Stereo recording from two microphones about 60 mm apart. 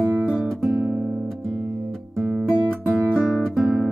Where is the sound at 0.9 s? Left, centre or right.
Right.